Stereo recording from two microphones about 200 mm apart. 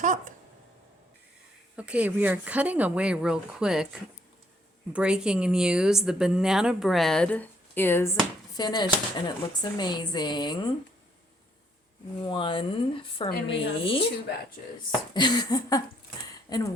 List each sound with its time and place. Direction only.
0.0 s a sound: 40° right (ahead or behind)
1.7 s speech: 5° right (ahead or behind)
4.9 s a woman's voice: 5° right (ahead or behind); by 10.7 s 20° left (ahead or behind)
12.2 s speech: 25° left (ahead or behind)
15.1 s speech: 20° left (ahead or behind)